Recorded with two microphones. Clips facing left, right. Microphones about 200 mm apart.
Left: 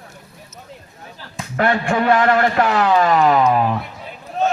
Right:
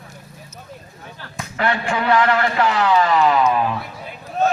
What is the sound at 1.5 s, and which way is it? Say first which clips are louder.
Speech: left 4 dB; 45° left (ahead or behind).